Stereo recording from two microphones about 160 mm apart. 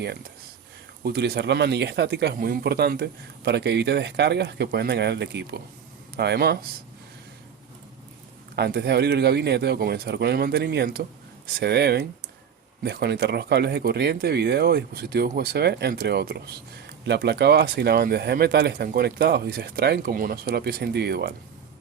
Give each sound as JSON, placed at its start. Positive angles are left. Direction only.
{"t": 1.0, "sound": "speech", "side_deg": -90}
{"t": 8.5, "sound": "speech", "side_deg": -90}